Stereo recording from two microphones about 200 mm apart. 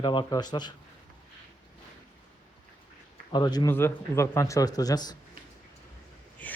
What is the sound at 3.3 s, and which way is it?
Speech, 20° left (ahead or behind).